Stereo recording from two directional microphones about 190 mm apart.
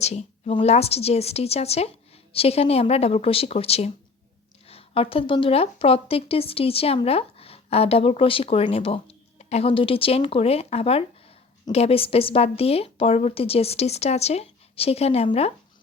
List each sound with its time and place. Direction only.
0.0 s a woman's voice: 35° left (ahead or behind)